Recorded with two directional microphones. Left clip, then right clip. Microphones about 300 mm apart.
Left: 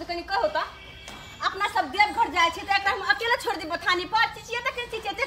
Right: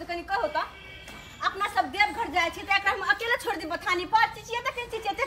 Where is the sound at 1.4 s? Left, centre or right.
Centre.